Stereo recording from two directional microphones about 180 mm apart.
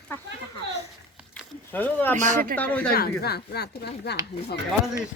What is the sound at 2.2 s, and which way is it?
Speech, 45° right (ahead or behind).